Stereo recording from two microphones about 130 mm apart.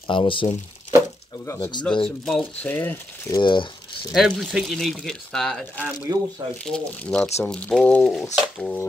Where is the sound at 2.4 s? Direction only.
15° left (ahead or behind).